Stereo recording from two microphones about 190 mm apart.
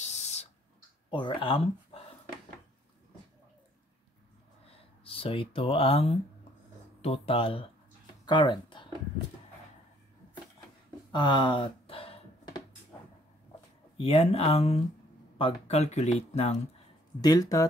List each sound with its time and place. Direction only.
0.0 s a sound: 35° left (ahead or behind)
1.1 s speech: 25° left (ahead or behind)
5.0 s speech: 30° left (ahead or behind)
11.1 s a sound: 25° left (ahead or behind)
13.9 s speech: 30° left (ahead or behind)
17.2 s speech: 20° left (ahead or behind)